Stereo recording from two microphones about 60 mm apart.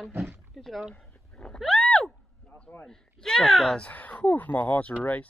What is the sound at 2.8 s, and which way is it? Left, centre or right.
Speech, centre.